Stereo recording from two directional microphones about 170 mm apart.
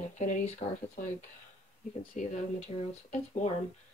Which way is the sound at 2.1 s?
40° left (ahead or behind).